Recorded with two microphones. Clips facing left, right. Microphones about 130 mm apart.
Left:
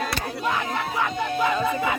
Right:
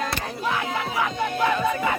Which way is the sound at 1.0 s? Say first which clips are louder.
Right 1 dB; 5° left (ahead or behind).